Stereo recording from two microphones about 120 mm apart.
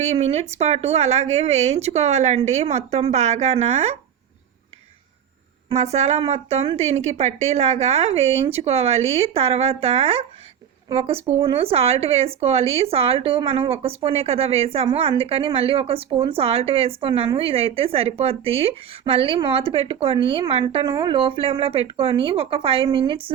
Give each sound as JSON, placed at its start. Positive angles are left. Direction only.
{"t": 0.0, "sound": "a woman's voice", "side_deg": -65}
{"t": 5.6, "sound": "a woman's voice", "side_deg": -65}
{"t": 20.8, "sound": "speech", "side_deg": -40}